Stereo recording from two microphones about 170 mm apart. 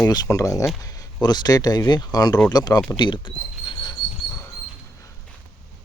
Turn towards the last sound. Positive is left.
turn(degrees=20)  # may be behind; listen again after turning